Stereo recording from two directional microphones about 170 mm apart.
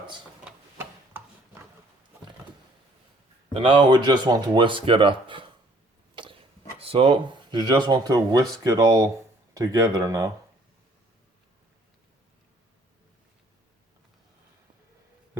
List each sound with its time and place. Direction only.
0.4 s a sound: 10° right (ahead or behind)
3.5 s speech: 30° right (ahead or behind)
6.7 s speech: 35° right (ahead or behind); by 10.3 s 20° right (ahead or behind)